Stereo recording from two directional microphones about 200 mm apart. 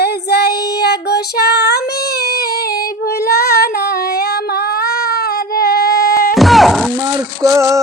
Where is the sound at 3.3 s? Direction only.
50° left (ahead or behind).